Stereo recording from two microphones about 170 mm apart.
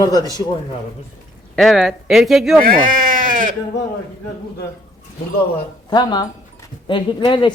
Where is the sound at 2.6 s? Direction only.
55° right (ahead or behind).